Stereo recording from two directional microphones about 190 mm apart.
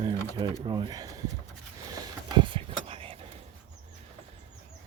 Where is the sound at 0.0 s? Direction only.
20° right (ahead or behind).